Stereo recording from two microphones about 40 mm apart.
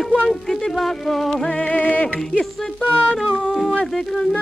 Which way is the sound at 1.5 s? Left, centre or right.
Left.